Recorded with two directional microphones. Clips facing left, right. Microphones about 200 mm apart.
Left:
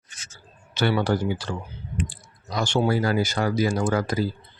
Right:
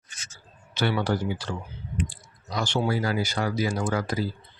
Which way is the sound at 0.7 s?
45° left (ahead or behind).